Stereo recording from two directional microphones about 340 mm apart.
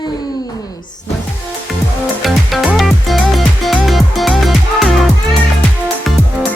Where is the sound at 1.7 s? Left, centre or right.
Centre.